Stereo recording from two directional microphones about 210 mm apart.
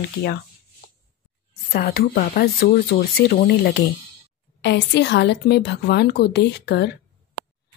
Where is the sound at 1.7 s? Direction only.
45° left (ahead or behind).